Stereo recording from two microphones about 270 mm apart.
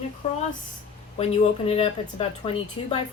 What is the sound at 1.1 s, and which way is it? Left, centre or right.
Speech, left.